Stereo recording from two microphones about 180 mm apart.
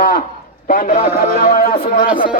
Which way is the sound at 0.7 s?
45° left (ahead or behind).